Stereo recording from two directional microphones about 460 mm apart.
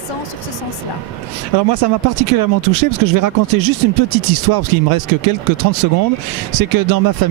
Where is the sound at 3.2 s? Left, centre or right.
Right.